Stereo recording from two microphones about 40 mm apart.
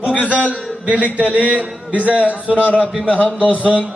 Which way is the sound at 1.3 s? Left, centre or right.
Right.